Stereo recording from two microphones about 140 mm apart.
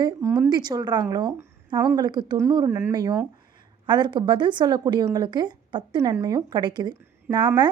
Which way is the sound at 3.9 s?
35° right (ahead or behind).